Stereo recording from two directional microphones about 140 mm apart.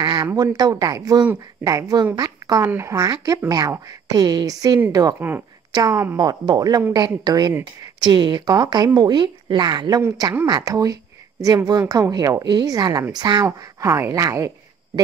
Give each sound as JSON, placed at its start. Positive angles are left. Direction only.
{"t": 0.0, "sound": "a sound", "side_deg": -30}
{"t": 0.3, "sound": "a woman's voice", "side_deg": -25}
{"t": 5.3, "sound": "speech", "side_deg": -10}
{"t": 5.7, "sound": "speech", "side_deg": -25}